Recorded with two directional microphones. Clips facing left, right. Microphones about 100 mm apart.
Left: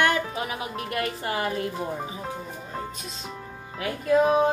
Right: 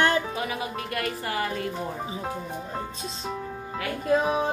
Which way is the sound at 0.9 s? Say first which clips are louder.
Left 3 dB; 25° left (ahead or behind).